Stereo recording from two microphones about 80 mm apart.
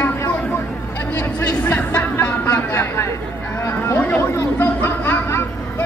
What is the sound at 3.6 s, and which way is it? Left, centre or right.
Chatter, left.